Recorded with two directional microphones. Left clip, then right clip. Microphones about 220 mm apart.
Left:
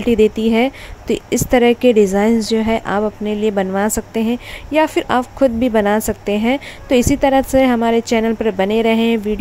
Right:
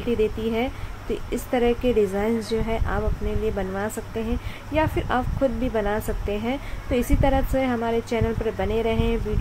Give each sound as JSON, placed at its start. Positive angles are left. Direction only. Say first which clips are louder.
{"t": 0.0, "sound": "speech", "louder": "left 10 dB", "side_deg": 40}